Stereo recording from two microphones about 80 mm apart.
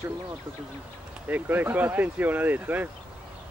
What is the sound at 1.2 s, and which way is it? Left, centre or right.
Speech, right.